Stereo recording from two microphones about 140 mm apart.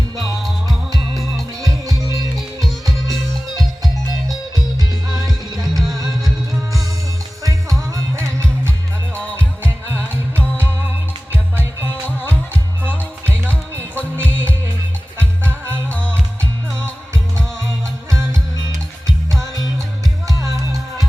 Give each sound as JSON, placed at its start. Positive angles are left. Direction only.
{"t": 0.7, "sound": "music", "side_deg": 0}
{"t": 5.6, "sound": "music", "side_deg": 0}
{"t": 7.9, "sound": "music", "side_deg": -20}
{"t": 9.9, "sound": "music", "side_deg": -15}
{"t": 13.7, "sound": "music", "side_deg": -15}
{"t": 15.9, "sound": "music", "side_deg": 10}
{"t": 20.2, "sound": "music", "side_deg": -25}